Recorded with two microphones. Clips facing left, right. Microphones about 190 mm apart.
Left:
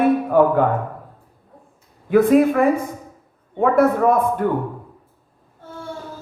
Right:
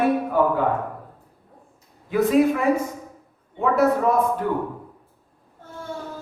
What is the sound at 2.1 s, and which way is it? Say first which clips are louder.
A man's voice: left 4 dB; 55° left (ahead or behind).